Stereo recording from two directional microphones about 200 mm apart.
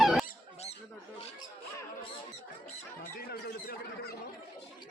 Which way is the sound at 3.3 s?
50° left (ahead or behind).